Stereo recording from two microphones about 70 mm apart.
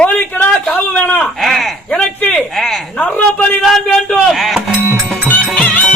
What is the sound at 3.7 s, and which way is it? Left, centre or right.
Speech, centre.